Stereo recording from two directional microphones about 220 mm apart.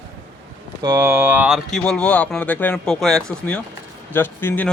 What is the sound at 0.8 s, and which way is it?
Speech, 20° right (ahead or behind).